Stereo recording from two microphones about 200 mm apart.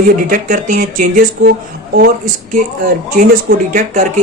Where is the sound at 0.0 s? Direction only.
40° right (ahead or behind).